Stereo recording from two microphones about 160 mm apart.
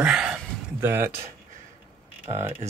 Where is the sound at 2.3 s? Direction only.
15° right (ahead or behind).